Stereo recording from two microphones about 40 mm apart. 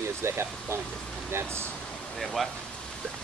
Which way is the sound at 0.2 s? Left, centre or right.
Right.